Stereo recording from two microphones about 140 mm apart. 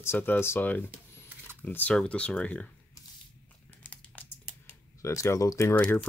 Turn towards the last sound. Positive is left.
turn(degrees=10)  # may be behind; listen again after turning